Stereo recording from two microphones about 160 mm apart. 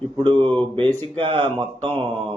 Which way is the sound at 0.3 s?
10° left (ahead or behind).